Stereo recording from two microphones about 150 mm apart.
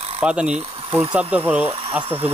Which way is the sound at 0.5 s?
40° right (ahead or behind).